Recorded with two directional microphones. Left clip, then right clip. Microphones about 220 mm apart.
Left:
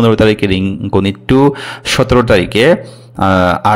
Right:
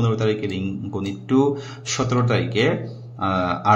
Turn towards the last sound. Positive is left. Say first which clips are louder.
# left 10 dB
turn(degrees=50)  # may be behind; listen again after turning